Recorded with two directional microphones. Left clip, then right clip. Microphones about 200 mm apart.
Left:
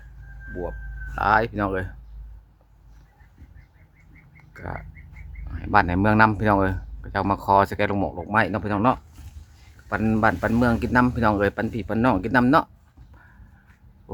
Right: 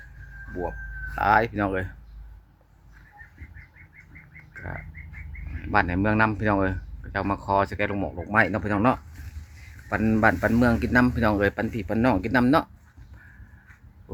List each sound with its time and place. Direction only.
1.1 s speech: 10° left (ahead or behind)
4.5 s bird: 15° left (ahead or behind)
5.6 s speech: 20° left (ahead or behind)
8.1 s speech: 10° left (ahead or behind)